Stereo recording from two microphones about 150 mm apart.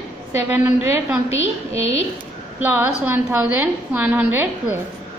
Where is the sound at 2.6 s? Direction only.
15° right (ahead or behind).